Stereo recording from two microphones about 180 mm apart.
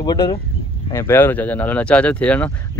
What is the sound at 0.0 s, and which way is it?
Speech, 20° left (ahead or behind).